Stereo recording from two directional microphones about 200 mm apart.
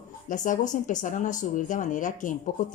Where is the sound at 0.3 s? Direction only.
40° left (ahead or behind).